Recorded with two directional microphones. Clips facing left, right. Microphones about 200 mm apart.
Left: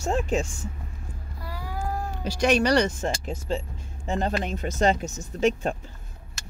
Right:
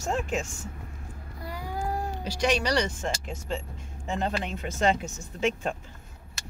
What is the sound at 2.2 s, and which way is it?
Speech, 50° left (ahead or behind).